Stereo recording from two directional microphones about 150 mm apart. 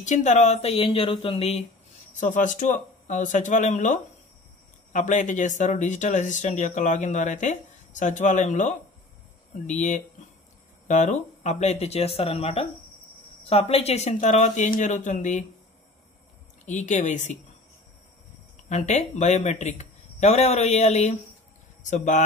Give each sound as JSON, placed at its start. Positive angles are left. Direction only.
{"t": 0.0, "sound": "speech", "side_deg": 50}
{"t": 2.1, "sound": "speech", "side_deg": 60}
{"t": 16.6, "sound": "speech", "side_deg": 50}
{"t": 18.7, "sound": "speech", "side_deg": 50}